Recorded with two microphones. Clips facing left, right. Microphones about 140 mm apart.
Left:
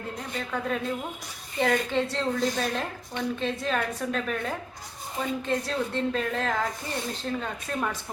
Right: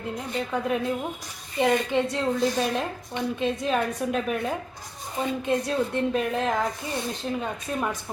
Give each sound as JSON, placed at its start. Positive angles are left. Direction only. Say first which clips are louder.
{"t": 0.3, "sound": "a woman's voice", "louder": "right 4 dB", "side_deg": -15}